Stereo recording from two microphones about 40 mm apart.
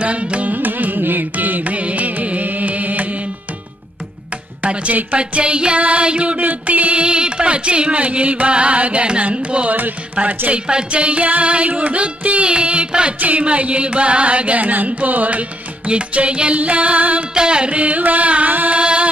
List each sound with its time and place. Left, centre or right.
0.0 s carnatic music: right
4.6 s carnatic music: right
6.4 s music: right
11.8 s a sound: right
13.2 s carnatic music: right
15.9 s music: right
16.5 s carnatic music: right
17.3 s carnatic music: right
18.8 s carnatic music: right